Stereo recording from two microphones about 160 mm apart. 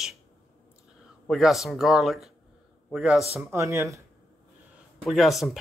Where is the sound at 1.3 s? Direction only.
Centre (ahead or behind).